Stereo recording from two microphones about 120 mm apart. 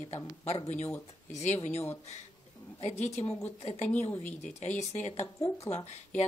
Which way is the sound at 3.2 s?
20° left (ahead or behind).